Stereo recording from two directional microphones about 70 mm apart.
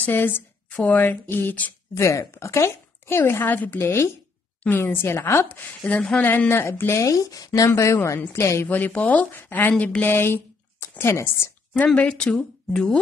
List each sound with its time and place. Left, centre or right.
0.0 s speech: left
2.0 s a woman's voice: left
3.2 s a woman's voice: left
5.9 s a woman's voice: centre
6.6 s a woman's voice: left
7.0 s a woman's voice: left
8.6 s a woman's voice: left
11.7 s a woman's voice: centre